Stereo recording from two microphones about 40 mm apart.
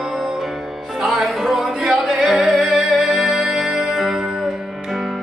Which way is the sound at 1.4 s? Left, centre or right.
Centre.